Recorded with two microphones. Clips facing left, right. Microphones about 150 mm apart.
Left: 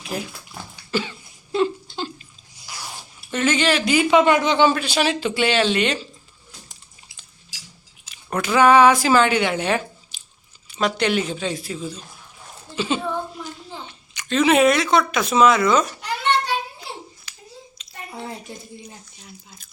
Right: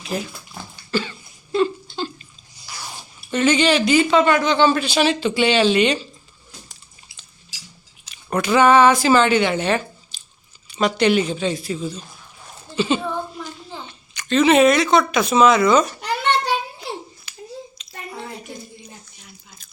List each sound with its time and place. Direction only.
0.0 s speech: 5° left (ahead or behind)
0.9 s cough: 15° left (ahead or behind)
1.5 s a sound: 15° left (ahead or behind)
2.7 s zipper: 10° left (ahead or behind)
3.2 s speech: centre (ahead or behind)
4.7 s speech: 5° left (ahead or behind)
8.0 s speech: 5° left (ahead or behind)
10.1 s chewing: 15° left (ahead or behind)
10.7 s speech: centre (ahead or behind)
12.7 s a sound: centre (ahead or behind)
14.3 s speech: 5° left (ahead or behind)
17.3 s a sound: 15° right (ahead or behind)